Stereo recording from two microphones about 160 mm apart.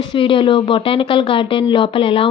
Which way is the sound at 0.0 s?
35° left (ahead or behind).